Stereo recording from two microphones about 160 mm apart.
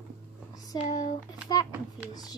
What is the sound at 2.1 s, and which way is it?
Speech, 25° left (ahead or behind).